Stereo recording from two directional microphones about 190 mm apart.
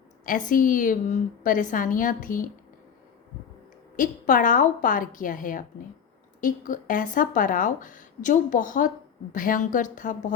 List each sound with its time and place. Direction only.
0.5 s speech: 45° left (ahead or behind)
3.9 s speech: 45° left (ahead or behind)